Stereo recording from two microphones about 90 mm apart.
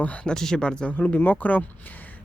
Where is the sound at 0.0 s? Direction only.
15° left (ahead or behind).